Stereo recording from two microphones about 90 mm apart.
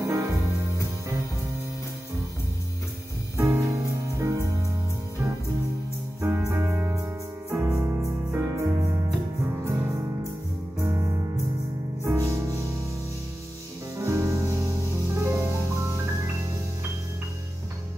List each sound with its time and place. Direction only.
0.0 s music: 35° right (ahead or behind)
3.3 s music: 30° right (ahead or behind)
6.2 s music: 35° right (ahead or behind)
10.8 s music: 35° right (ahead or behind)
13.9 s music: 35° right (ahead or behind)